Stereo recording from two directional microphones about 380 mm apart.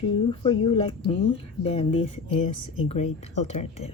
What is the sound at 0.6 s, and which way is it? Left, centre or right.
Speech, centre.